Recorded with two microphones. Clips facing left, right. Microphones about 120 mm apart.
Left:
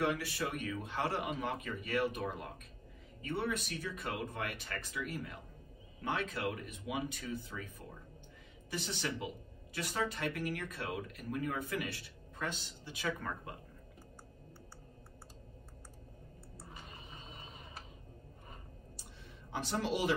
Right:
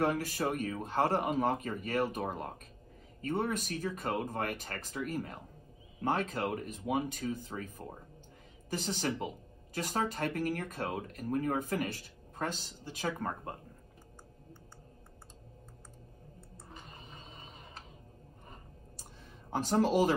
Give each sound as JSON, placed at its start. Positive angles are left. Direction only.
{"t": 0.0, "sound": "speech", "side_deg": -45}
{"t": 19.5, "sound": "speech", "side_deg": -40}